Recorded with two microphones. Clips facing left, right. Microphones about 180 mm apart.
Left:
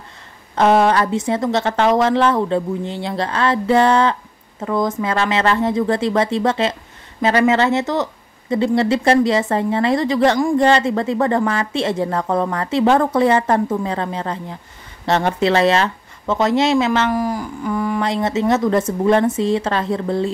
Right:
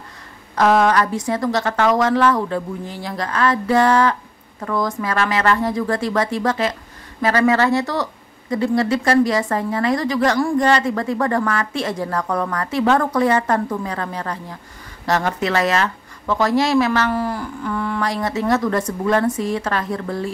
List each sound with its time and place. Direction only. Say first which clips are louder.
0.6 s a woman's voice: left 1 dB; 25° left (ahead or behind)
18.0 s a woman's voice: left 2 dB; 25° left (ahead or behind)